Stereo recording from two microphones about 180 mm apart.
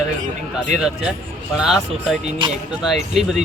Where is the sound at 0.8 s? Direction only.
5° right (ahead or behind).